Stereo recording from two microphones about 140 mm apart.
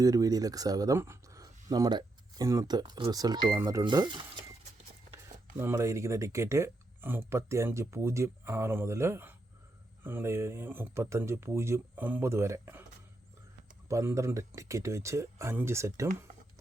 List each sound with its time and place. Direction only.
0.0 s speech: 25° right (ahead or behind)
5.5 s speech: 20° right (ahead or behind)
13.8 s speech: 20° right (ahead or behind)